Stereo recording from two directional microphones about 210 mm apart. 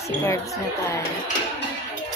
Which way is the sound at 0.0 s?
15° left (ahead or behind).